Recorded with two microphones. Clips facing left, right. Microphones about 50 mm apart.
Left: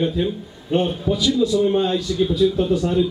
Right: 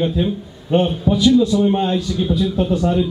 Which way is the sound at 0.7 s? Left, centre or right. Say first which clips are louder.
Right 3 dB; right.